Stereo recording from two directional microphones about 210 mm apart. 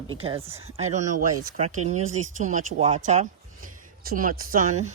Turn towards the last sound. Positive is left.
turn(degrees=-35)  # may be behind; listen again after turning